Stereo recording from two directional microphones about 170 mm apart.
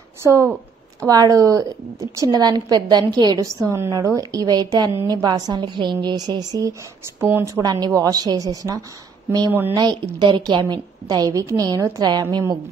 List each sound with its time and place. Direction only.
0.2 s a woman's voice: 15° right (ahead or behind)
10.1 s a woman's voice: 25° right (ahead or behind)